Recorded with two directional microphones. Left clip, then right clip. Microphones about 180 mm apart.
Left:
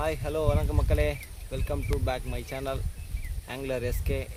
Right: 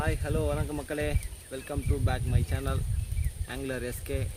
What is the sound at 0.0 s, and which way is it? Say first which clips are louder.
Speech: left 3 dB; 5° right (ahead or behind).